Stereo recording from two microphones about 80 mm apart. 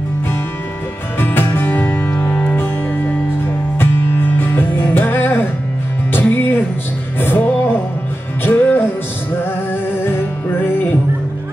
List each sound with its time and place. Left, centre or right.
1.2 s music: left
3.7 s music: left
10.0 s music: left